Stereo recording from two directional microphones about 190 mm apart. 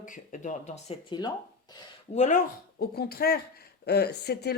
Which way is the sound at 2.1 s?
40° left (ahead or behind).